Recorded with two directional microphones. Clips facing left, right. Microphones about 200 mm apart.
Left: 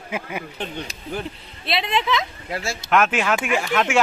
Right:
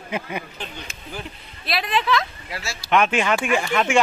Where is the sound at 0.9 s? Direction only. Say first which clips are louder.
Left 2 dB; 35° left (ahead or behind).